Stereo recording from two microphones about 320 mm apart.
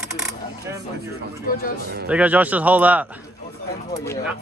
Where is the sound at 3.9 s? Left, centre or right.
Centre.